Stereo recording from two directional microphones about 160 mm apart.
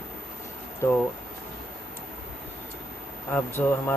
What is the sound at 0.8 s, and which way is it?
Speech, 15° left (ahead or behind).